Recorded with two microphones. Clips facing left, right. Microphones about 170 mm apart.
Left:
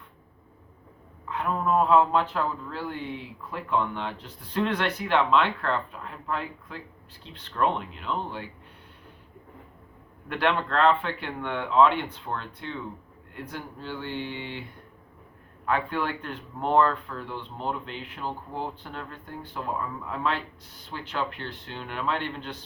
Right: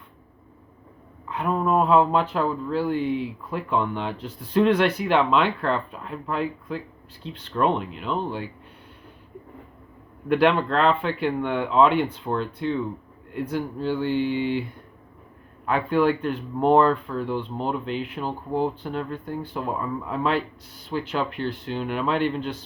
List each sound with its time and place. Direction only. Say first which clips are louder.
1.4 s speech: right 3 dB; 15° right (ahead or behind)
10.2 s speech: right 7 dB; 10° right (ahead or behind)
15.6 s speech: right 7 dB; 10° right (ahead or behind)